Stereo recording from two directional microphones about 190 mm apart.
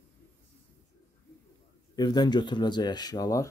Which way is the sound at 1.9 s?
20° left (ahead or behind).